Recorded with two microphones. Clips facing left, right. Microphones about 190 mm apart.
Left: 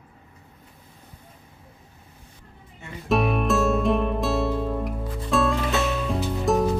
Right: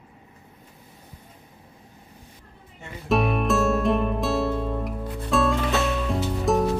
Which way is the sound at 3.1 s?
Centre (ahead or behind).